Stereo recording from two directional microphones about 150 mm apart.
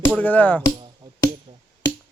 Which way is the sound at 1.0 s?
30° right (ahead or behind).